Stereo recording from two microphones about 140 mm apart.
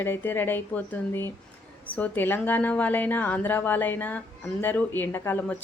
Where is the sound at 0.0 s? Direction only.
15° left (ahead or behind).